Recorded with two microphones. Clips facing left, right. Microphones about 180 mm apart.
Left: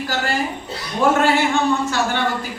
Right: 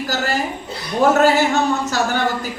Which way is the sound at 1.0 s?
40° right (ahead or behind).